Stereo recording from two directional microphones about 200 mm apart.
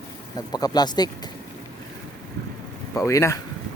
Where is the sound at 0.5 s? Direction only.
20° left (ahead or behind).